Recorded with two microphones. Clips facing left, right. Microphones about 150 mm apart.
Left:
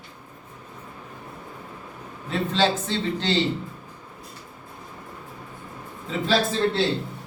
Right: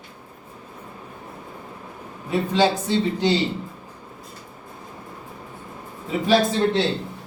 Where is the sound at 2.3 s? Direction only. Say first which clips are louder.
Right 3 dB; 10° right (ahead or behind).